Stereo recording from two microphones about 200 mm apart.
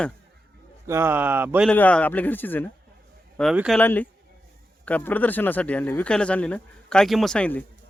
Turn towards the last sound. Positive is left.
turn(degrees=5)  # may be behind; listen again after turning